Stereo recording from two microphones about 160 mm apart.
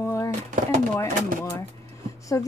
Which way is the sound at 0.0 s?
20° left (ahead or behind).